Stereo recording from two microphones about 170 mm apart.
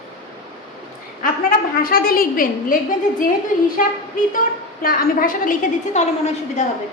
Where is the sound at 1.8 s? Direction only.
60° left (ahead or behind).